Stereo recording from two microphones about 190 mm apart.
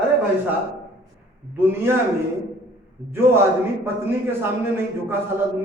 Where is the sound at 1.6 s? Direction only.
10° right (ahead or behind).